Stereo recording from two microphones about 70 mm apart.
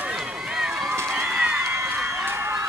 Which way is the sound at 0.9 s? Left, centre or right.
Right.